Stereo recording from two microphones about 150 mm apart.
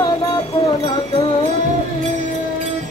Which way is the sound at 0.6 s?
35° left (ahead or behind).